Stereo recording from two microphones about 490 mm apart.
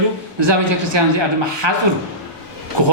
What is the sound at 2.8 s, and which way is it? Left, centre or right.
Speech, right.